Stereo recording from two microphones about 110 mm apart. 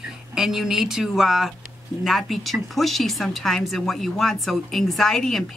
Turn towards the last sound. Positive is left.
turn(degrees=5)  # may be behind; listen again after turning